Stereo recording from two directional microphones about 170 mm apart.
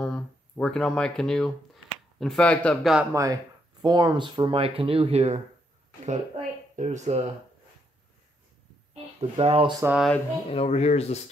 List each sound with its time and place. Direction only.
0.0 s a man's voice: 5° left (ahead or behind)
3.1 s speech: 20° right (ahead or behind); by 5.4 s 40° right (ahead or behind)
6.8 s speech: 45° right (ahead or behind)
9.2 s speech: 35° right (ahead or behind)
9.9 s a man's voice: centre (ahead or behind)
10.5 s speech: 35° left (ahead or behind)